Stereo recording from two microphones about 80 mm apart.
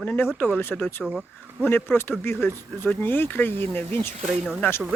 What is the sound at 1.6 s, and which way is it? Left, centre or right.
Speech, left.